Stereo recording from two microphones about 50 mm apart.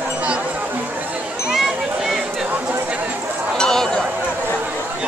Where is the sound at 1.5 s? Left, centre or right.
Centre.